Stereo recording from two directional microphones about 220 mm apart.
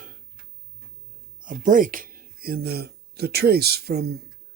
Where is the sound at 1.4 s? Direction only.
35° right (ahead or behind).